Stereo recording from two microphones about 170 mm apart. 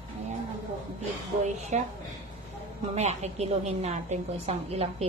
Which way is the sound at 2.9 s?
40° right (ahead or behind).